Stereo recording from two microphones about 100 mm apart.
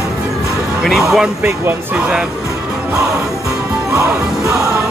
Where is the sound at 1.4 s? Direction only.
20° right (ahead or behind).